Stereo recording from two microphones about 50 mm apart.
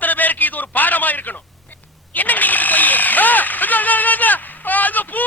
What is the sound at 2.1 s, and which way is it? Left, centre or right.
Vehicle, left.